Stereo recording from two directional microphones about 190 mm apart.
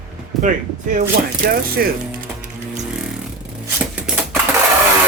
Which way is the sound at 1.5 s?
50° right (ahead or behind).